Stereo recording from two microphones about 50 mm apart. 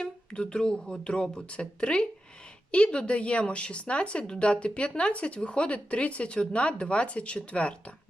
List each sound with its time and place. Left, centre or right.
0.0 s a woman's voice: centre